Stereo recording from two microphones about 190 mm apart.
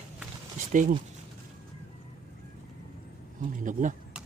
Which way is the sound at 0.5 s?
45° right (ahead or behind).